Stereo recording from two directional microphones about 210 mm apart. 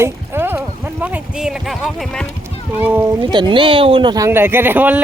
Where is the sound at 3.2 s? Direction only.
20° right (ahead or behind).